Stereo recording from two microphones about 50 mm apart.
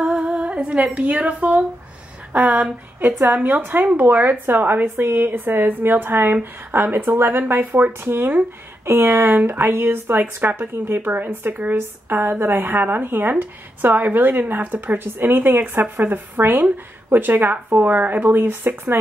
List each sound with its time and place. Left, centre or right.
0.1 s humming: centre
0.8 s a woman's voice: right
3.0 s speech: right